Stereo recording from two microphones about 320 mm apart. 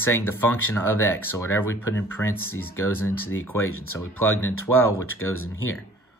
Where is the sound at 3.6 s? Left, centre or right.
Left.